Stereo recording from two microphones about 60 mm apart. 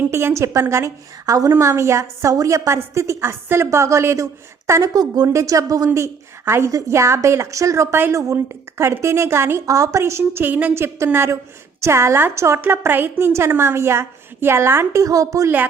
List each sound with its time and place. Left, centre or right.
0.1 s a woman's voice: right
1.3 s a woman's voice: right
1.5 s a woman's voice: right
2.6 s a woman's voice: right
4.8 s a woman's voice: right
6.7 s a woman's voice: right
9.6 s a woman's voice: right
10.0 s a woman's voice: right
10.4 s a woman's voice: right
10.8 s a woman's voice: right
12.6 s a woman's voice: right
14.9 s a woman's voice: right